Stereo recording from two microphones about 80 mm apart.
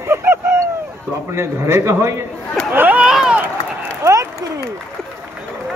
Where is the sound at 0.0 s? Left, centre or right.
Right.